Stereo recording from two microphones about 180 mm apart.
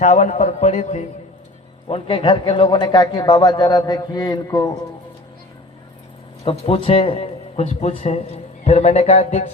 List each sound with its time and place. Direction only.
0.0 s speech: 40° left (ahead or behind); by 4.7 s 20° left (ahead or behind)
6.4 s a man's voice: 30° left (ahead or behind)